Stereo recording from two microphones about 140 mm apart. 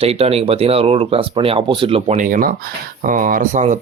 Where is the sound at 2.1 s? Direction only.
70° right (ahead or behind).